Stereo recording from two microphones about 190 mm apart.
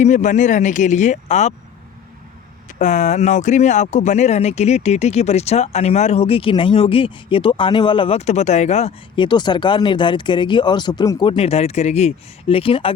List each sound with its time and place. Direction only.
0.0 s speech: 40° left (ahead or behind)
2.7 s speech: 40° left (ahead or behind)